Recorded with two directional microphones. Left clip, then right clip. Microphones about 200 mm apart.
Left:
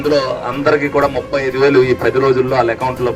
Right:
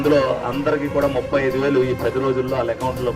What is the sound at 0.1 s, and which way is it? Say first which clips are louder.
Speech: left 3 dB; 25° left (ahead or behind).